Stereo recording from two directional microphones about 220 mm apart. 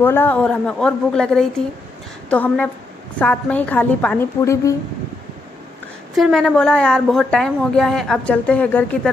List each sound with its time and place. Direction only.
0.0 s a woman's voice: 10° left (ahead or behind)
6.1 s a woman's voice: centre (ahead or behind)